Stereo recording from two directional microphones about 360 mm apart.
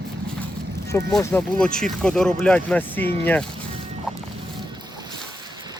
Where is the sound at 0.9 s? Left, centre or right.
Centre.